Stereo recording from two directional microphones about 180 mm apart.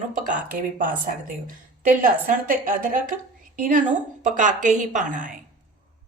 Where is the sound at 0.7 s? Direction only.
50° right (ahead or behind).